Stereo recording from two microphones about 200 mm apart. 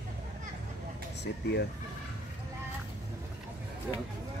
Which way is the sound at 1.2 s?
55° left (ahead or behind).